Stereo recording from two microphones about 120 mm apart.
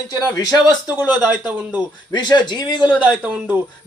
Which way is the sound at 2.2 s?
40° left (ahead or behind).